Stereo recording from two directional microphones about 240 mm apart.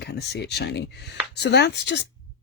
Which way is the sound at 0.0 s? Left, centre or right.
Left.